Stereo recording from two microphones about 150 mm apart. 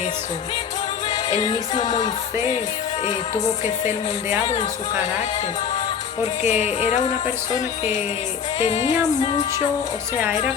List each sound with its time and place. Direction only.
1.0 s music: 35° left (ahead or behind)
3.0 s music: 50° left (ahead or behind)
4.4 s speech: 40° left (ahead or behind)
6.4 s music: 50° left (ahead or behind)
8.5 s music: 45° left (ahead or behind)